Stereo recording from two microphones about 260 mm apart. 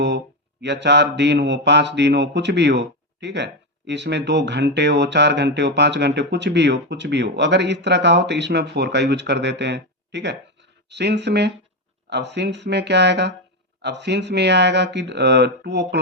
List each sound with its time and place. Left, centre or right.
0.6 s speech: right